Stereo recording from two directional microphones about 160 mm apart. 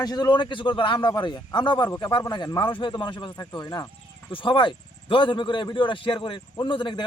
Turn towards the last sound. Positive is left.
turn(degrees=30)  # may be behind; listen again after turning